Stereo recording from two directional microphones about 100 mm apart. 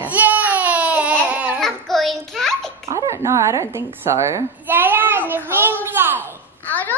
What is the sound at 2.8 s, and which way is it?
A woman's voice, 30° right (ahead or behind).